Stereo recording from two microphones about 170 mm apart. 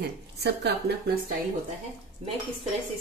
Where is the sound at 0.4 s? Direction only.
75° right (ahead or behind).